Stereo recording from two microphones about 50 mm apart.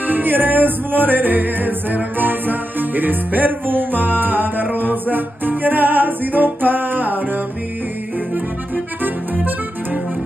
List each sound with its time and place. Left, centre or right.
0.0 s music: right
9.0 s accordion: right